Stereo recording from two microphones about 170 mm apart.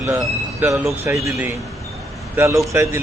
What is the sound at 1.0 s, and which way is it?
A man's voice, 15° right (ahead or behind).